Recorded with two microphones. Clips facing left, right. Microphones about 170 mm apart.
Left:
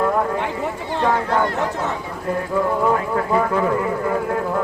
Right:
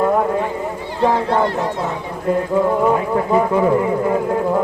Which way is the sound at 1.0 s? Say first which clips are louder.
Right 4 dB; 30° right (ahead or behind).